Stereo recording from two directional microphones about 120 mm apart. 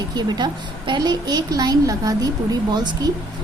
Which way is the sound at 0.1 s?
35° right (ahead or behind).